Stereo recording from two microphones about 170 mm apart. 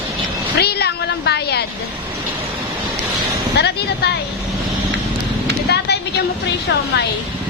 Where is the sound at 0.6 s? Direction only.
70° left (ahead or behind).